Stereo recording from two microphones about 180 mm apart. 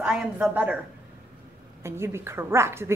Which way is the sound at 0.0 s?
5° right (ahead or behind).